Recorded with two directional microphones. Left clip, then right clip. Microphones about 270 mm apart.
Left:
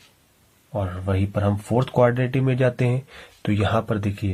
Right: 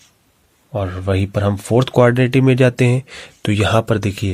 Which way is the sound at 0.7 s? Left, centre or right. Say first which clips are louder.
Right 6 dB; right.